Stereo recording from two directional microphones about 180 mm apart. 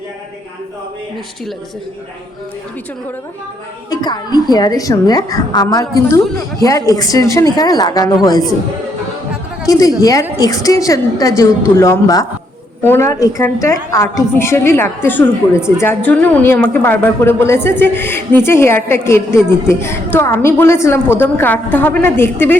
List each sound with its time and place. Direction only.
3.8 s a woman's voice: 20° left (ahead or behind)
9.6 s a woman's voice: 20° left (ahead or behind)